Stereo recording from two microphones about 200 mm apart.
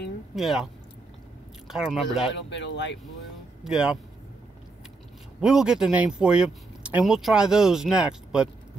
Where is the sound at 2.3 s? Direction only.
60° left (ahead or behind).